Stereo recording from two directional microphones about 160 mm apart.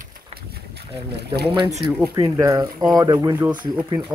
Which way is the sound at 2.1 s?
20° right (ahead or behind).